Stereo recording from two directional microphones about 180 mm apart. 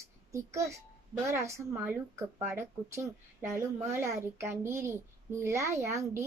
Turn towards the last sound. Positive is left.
turn(degrees=-15)  # may be behind; listen again after turning